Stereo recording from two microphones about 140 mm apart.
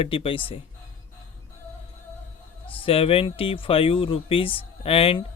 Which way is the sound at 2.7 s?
40° left (ahead or behind).